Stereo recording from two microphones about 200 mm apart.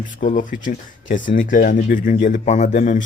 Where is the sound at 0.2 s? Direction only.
40° left (ahead or behind).